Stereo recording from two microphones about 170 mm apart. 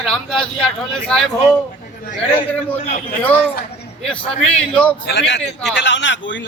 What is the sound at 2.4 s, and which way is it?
Speech, 10° left (ahead or behind).